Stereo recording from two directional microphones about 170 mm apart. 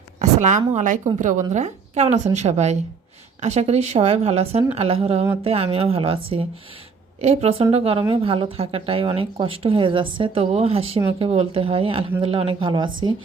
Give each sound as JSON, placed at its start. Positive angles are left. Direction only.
{"t": 0.2, "sound": "a woman's voice", "side_deg": -45}